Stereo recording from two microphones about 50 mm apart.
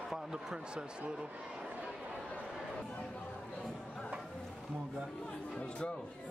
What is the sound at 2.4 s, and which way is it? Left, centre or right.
Chatter, centre.